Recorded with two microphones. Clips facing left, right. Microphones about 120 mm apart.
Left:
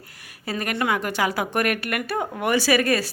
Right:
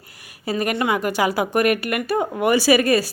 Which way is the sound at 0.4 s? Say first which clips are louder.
Right 4 dB; 10° right (ahead or behind).